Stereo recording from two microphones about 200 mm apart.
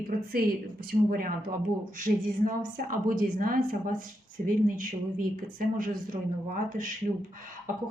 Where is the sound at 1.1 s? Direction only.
45° right (ahead or behind).